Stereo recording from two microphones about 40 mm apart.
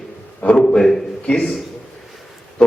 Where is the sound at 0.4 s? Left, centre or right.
Left.